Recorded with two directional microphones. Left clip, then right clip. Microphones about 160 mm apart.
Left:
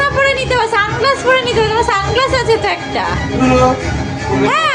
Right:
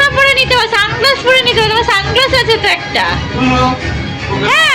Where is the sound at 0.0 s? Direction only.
15° left (ahead or behind).